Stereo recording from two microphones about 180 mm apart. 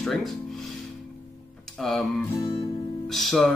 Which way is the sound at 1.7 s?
Centre (ahead or behind).